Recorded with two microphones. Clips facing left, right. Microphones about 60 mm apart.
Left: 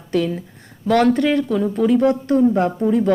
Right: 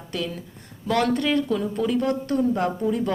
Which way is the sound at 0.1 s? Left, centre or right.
Left.